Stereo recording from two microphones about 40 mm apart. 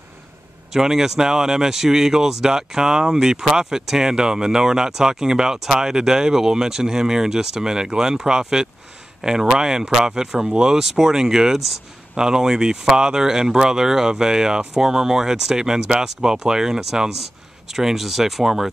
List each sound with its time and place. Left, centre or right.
0.7 s speech: centre